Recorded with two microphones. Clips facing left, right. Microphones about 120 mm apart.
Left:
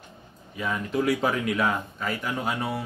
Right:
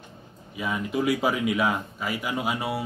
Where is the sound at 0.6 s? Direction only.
5° right (ahead or behind).